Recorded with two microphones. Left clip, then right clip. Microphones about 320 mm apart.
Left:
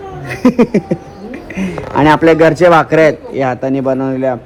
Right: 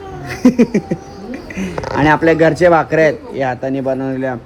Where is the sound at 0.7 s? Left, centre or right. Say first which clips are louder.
Left 4 dB; centre.